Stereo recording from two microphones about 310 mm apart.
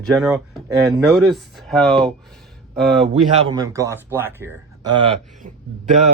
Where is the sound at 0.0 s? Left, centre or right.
Centre.